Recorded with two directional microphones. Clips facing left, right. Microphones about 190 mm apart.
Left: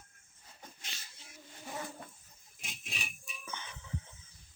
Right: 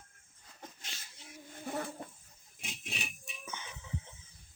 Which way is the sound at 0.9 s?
45° right (ahead or behind).